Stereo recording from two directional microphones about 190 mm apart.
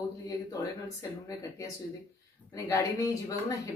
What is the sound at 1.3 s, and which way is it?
Speech, 15° left (ahead or behind).